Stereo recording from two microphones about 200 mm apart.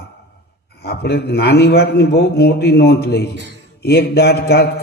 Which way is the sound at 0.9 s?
55° left (ahead or behind).